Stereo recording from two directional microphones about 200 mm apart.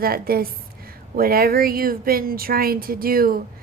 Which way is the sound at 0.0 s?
50° right (ahead or behind).